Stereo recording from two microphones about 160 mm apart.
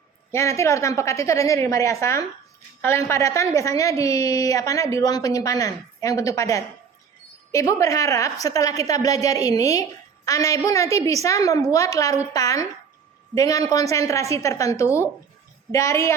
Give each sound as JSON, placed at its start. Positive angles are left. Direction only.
{"t": 0.3, "sound": "a woman's voice", "side_deg": 15}